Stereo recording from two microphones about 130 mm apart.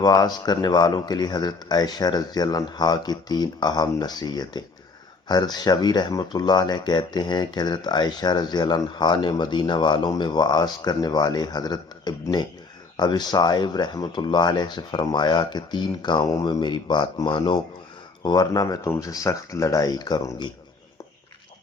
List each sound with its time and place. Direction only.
0.0 s speech: 30° left (ahead or behind)